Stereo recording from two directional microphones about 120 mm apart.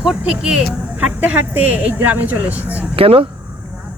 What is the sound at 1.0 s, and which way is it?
Speech, 10° right (ahead or behind).